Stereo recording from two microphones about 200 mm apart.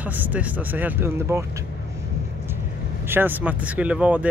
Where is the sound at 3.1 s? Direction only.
10° right (ahead or behind).